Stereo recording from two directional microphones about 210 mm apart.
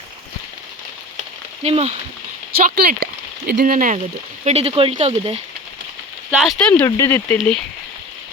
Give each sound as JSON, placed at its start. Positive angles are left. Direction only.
{"t": 1.6, "sound": "speech", "side_deg": -30}
{"t": 2.6, "sound": "speech", "side_deg": -45}
{"t": 4.4, "sound": "speech", "side_deg": -30}
{"t": 6.4, "sound": "speech", "side_deg": 5}